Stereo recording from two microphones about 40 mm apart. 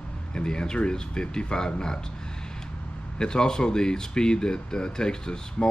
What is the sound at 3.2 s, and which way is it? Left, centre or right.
Speech, centre.